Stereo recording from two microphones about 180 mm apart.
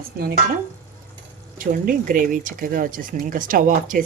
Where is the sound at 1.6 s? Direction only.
50° right (ahead or behind).